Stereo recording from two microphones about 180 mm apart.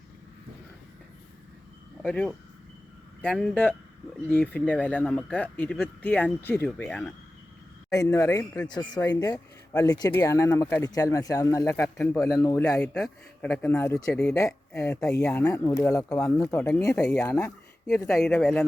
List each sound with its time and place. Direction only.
2.0 s speech: 5° left (ahead or behind)
12.8 s speech: 5° left (ahead or behind)